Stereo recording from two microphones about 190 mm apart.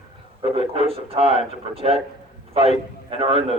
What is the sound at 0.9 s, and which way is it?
A man's voice, 30° right (ahead or behind).